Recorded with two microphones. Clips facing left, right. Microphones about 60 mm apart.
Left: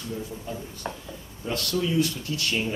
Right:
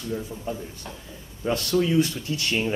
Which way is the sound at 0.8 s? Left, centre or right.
Left.